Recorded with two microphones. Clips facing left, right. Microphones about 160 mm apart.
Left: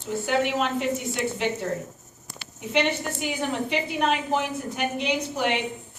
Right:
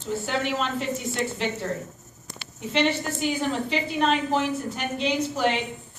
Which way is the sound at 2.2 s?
15° left (ahead or behind).